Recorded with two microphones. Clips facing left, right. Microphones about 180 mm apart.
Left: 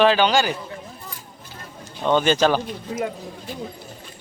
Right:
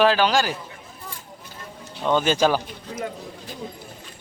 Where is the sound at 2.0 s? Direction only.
5° right (ahead or behind).